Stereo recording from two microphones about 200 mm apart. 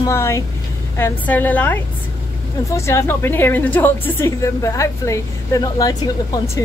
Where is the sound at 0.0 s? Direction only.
15° left (ahead or behind).